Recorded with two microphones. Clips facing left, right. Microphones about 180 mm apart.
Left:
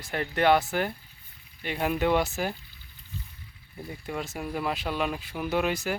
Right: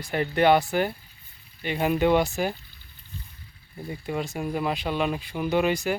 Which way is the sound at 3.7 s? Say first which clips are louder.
Right 4 dB; centre (ahead or behind).